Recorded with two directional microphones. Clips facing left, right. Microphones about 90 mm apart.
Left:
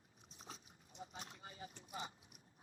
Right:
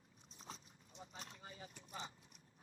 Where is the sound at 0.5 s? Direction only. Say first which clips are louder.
Left 2 dB; centre (ahead or behind).